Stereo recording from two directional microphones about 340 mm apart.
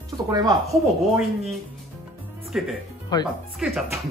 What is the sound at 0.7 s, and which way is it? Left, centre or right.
Speech, centre.